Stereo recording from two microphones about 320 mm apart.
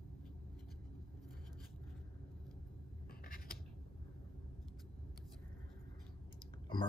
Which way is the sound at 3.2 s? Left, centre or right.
Left.